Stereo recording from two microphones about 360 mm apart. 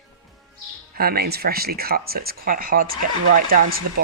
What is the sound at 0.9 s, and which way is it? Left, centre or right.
Speech, right.